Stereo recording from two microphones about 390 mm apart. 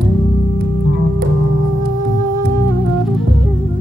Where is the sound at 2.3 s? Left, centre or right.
Centre.